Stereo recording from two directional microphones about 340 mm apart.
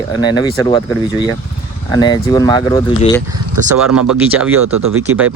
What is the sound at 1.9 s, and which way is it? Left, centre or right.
Speech, centre.